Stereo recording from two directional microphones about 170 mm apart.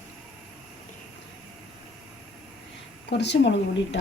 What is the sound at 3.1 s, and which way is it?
Speech, 90° left.